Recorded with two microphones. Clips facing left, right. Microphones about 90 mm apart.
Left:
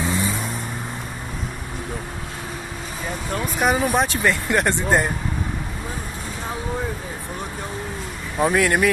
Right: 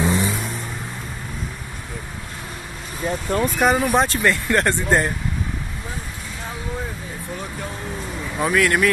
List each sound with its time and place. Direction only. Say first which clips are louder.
0.0 s vehicle: right 3 dB; 15° right (ahead or behind)
3.5 s speech: even; 5° left (ahead or behind)
8.4 s speech: even; 20° left (ahead or behind)